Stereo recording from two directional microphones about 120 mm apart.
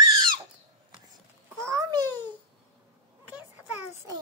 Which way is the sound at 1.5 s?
25° right (ahead or behind).